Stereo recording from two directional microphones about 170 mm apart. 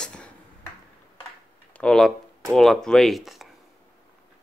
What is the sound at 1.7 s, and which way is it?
Speech, 5° left (ahead or behind).